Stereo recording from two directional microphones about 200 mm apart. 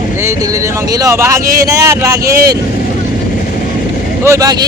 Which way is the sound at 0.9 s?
15° right (ahead or behind).